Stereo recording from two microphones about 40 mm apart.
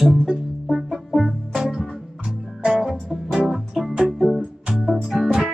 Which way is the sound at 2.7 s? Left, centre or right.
Centre.